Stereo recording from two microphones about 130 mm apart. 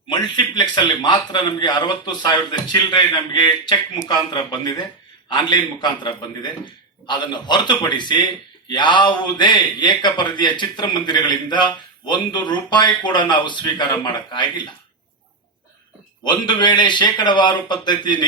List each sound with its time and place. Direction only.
0.1 s a man's voice: 35° left (ahead or behind)
16.2 s a man's voice: 35° left (ahead or behind)